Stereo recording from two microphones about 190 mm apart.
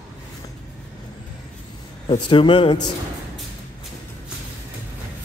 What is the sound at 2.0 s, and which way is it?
Speech, 25° left (ahead or behind).